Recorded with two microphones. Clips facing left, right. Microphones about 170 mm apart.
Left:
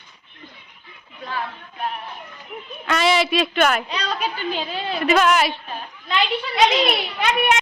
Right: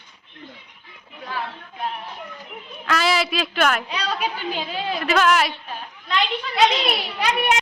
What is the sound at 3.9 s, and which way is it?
A woman's voice, 10° right (ahead or behind).